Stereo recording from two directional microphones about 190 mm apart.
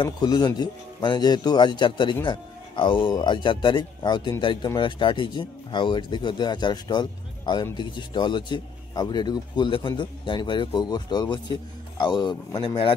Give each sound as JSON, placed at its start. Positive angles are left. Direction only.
{"t": 0.0, "sound": "a man's voice", "side_deg": 20}